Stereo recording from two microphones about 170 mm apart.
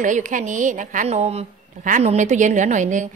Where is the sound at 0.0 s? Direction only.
50° right (ahead or behind).